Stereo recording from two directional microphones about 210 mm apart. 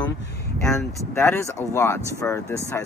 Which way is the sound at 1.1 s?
10° left (ahead or behind).